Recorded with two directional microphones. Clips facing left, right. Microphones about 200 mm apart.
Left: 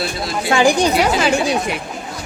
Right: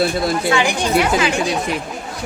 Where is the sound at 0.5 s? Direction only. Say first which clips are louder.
Left 7 dB; 40° left (ahead or behind).